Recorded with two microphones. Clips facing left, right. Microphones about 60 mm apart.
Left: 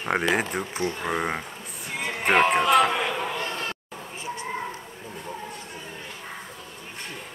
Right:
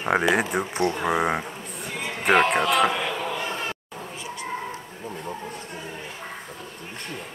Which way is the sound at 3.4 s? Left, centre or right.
Centre.